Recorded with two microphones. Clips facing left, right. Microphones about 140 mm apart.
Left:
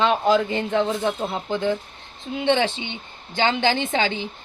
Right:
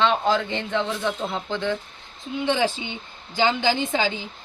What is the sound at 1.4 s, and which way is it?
Speech, 15° left (ahead or behind).